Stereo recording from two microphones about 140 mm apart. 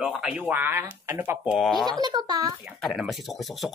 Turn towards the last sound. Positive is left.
turn(degrees=0)  # may be behind; listen again after turning